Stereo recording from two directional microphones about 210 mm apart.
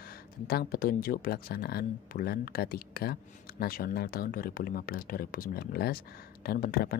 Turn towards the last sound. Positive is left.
turn(degrees=45)  # may be behind; listen again after turning